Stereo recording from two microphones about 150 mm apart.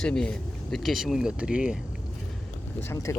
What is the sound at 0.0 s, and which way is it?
Speech, 5° left (ahead or behind).